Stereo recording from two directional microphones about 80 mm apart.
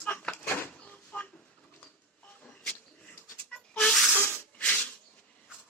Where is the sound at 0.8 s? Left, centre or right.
Centre.